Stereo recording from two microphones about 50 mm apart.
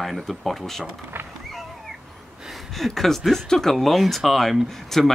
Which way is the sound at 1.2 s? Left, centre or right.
Right.